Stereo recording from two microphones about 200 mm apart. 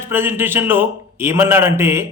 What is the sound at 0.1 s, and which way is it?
A man's voice, 10° right (ahead or behind).